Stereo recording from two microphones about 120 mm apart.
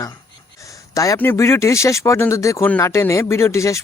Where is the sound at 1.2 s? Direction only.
20° left (ahead or behind).